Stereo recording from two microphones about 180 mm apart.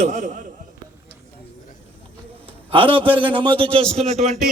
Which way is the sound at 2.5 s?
30° right (ahead or behind).